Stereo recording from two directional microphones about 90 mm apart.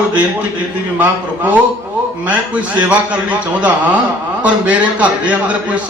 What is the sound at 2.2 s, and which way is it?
A man's voice, 15° right (ahead or behind).